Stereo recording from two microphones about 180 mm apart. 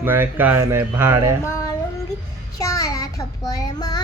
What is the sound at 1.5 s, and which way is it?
Child singing, 15° left (ahead or behind).